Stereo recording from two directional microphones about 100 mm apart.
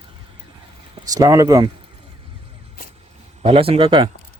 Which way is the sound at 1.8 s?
65° right (ahead or behind).